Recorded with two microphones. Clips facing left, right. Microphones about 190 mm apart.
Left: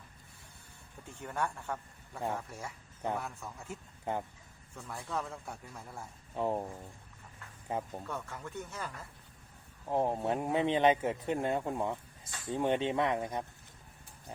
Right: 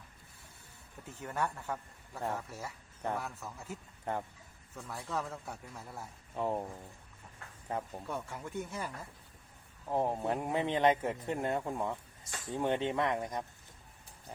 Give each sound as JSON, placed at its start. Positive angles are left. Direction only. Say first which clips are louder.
{"t": 1.0, "sound": "speech", "louder": "even", "side_deg": -5}
{"t": 4.0, "sound": "speech", "louder": "left 1 dB", "side_deg": 10}
{"t": 4.7, "sound": "speech", "louder": "even", "side_deg": 0}
{"t": 6.3, "sound": "speech", "louder": "left 1 dB", "side_deg": 5}
{"t": 7.7, "sound": "speech", "louder": "left 1 dB", "side_deg": 15}
{"t": 8.0, "sound": "speech", "louder": "right 1 dB", "side_deg": -10}
{"t": 10.0, "sound": "speech", "louder": "left 1 dB", "side_deg": 5}
{"t": 10.2, "sound": "speech", "louder": "left 2 dB", "side_deg": 20}